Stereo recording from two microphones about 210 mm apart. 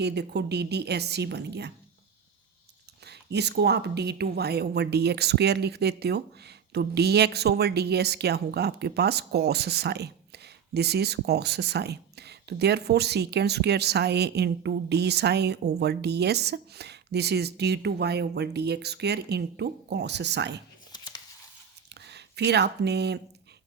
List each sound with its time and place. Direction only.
0.0 s speech: 55° right (ahead or behind)
3.0 s speech: 50° right (ahead or behind)
20.9 s a sound: 20° left (ahead or behind)
22.0 s speech: 55° right (ahead or behind)